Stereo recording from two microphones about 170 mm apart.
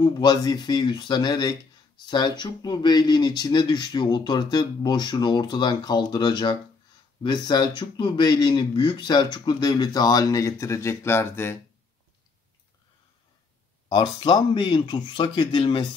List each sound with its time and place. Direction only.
0.0 s speech: 25° left (ahead or behind)
13.8 s speech: 25° left (ahead or behind)